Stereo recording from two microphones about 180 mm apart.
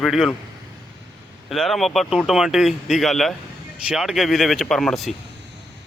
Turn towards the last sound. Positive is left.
turn(degrees=0)  # may be behind; listen again after turning